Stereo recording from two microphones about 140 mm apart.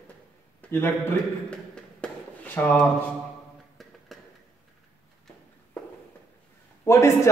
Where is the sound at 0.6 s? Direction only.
15° left (ahead or behind).